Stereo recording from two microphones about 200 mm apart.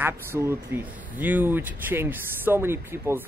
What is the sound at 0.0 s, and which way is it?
Speech, 10° right (ahead or behind).